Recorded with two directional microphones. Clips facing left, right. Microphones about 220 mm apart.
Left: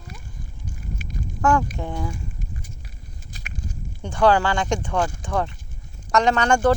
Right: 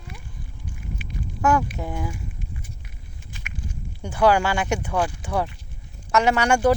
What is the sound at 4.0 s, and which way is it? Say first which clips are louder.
Speech: left 1 dB; 10° right (ahead or behind).